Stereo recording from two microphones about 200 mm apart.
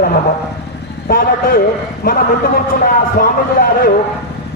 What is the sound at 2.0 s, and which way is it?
A man's voice, 50° left (ahead or behind).